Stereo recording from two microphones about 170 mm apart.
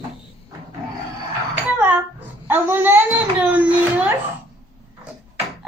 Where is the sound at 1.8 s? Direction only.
10° right (ahead or behind).